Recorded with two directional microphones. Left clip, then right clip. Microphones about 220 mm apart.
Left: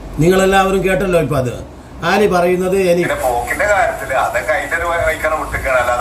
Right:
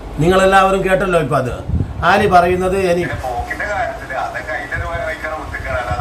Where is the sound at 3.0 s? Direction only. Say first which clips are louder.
Left 6 dB; 35° left (ahead or behind).